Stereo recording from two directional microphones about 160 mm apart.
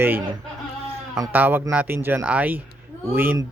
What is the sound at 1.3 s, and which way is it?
Speech, 10° right (ahead or behind).